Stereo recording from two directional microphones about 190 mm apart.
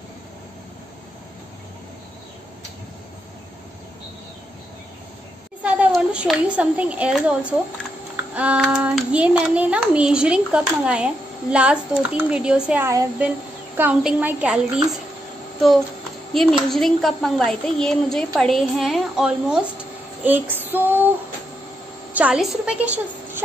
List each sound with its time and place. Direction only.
5.6 s a child's voice: 5° right (ahead or behind)
16.3 s a child's voice: centre (ahead or behind)
20.2 s female singing: 10° right (ahead or behind)
22.1 s a woman's voice: 5° right (ahead or behind)